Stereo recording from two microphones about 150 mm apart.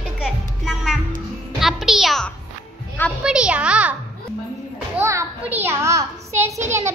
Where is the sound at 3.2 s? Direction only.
5° right (ahead or behind).